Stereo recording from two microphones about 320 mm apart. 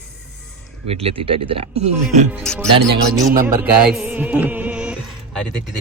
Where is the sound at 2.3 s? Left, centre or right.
Centre.